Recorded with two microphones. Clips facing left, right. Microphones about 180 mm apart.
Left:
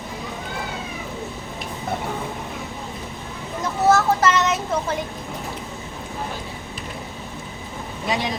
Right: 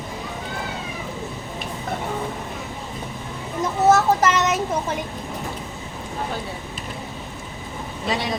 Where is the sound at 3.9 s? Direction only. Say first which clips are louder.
Even; 20° right (ahead or behind).